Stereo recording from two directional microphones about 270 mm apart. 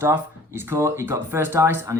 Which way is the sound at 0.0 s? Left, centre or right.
Centre.